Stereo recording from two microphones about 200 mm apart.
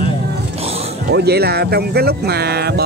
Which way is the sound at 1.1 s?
55° right (ahead or behind).